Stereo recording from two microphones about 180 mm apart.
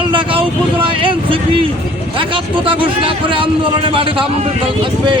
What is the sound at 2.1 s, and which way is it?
Speech, 30° right (ahead or behind).